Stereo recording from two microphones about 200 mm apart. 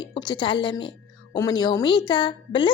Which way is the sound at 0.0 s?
20° left (ahead or behind).